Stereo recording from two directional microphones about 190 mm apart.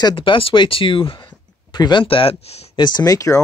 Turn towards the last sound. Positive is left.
turn(degrees=20)  # may be behind; listen again after turning